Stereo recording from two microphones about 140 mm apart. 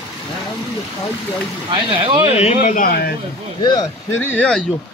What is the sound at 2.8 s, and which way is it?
Speech, 90° left.